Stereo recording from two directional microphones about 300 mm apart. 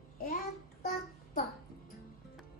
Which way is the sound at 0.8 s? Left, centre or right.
Left.